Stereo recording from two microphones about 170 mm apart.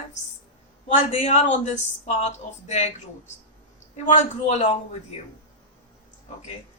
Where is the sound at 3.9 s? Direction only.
45° left (ahead or behind).